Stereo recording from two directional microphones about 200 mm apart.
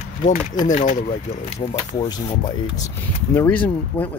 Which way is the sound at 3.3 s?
10° left (ahead or behind).